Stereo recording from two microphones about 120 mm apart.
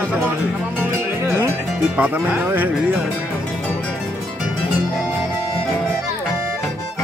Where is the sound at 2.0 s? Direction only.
15° right (ahead or behind).